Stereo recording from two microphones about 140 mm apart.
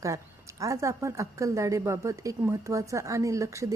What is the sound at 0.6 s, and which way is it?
A woman's voice, 20° right (ahead or behind).